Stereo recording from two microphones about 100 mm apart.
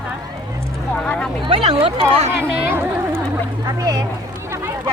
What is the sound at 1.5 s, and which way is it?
Speech, 85° right.